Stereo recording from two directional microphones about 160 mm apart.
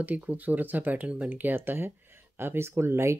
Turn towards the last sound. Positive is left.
turn(degrees=-15)  # may be behind; listen again after turning